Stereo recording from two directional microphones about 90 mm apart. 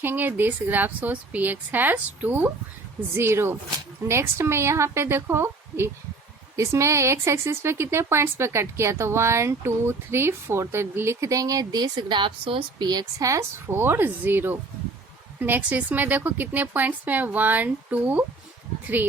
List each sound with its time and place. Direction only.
0.0 s a woman's voice: 25° right (ahead or behind); by 12.6 s 70° right (ahead or behind)
12.8 s speech: 50° right (ahead or behind)
13.2 s a woman's voice: 35° right (ahead or behind); by 18.3 s 15° right (ahead or behind)